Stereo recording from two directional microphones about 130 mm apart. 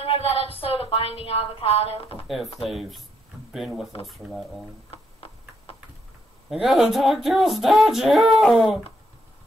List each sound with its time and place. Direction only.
0.0 s speech: 45° left (ahead or behind)
2.2 s speech: centre (ahead or behind)
4.9 s clip-clop: 45° left (ahead or behind)
6.5 s speech: centre (ahead or behind)